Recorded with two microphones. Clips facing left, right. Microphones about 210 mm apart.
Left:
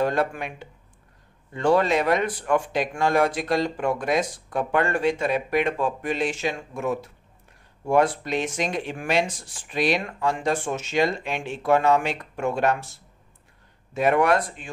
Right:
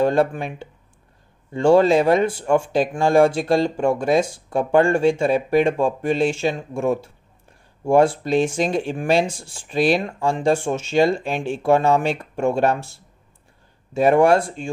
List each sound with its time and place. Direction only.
0.0 s speech: 30° right (ahead or behind)